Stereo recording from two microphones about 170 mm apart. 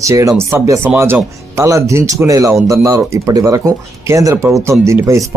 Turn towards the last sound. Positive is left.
turn(degrees=-15)  # may be behind; listen again after turning